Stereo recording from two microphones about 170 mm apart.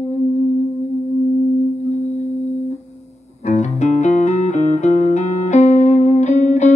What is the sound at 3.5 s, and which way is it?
Music, 45° left (ahead or behind).